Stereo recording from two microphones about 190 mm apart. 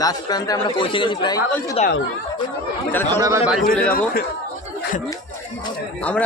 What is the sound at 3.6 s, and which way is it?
Speech, 50° left (ahead or behind).